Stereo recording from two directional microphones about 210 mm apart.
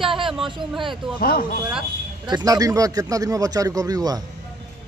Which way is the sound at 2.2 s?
20° right (ahead or behind).